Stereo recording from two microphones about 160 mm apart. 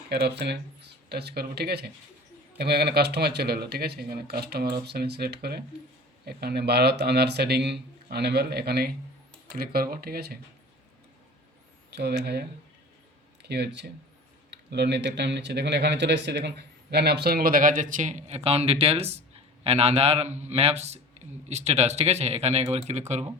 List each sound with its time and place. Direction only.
0.1 s speech: 90° right
9.5 s speech: 70° right (ahead or behind)
11.9 s a man's voice: 90° right; by 23.2 s 45° right (ahead or behind)